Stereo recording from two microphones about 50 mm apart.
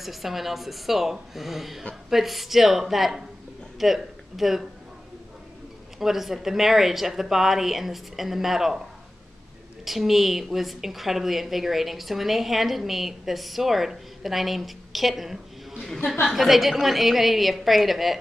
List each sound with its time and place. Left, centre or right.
0.0 s a woman's voice: centre
5.9 s a woman's voice: centre
9.8 s a woman's voice: centre